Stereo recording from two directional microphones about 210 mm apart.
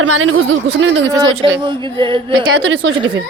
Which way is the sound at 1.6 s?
25° right (ahead or behind).